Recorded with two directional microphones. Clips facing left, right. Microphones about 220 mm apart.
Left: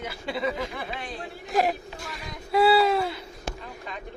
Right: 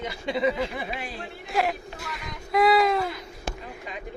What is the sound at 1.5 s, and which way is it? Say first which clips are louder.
Speech: left 2 dB; 40° left (ahead or behind).